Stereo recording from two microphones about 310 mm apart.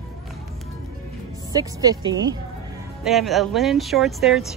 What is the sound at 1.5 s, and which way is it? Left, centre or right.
Speech, centre.